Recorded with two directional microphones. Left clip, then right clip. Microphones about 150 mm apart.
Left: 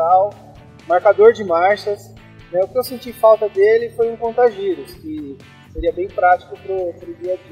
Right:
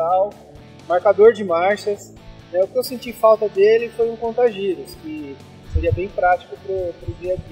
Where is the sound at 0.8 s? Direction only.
15° right (ahead or behind).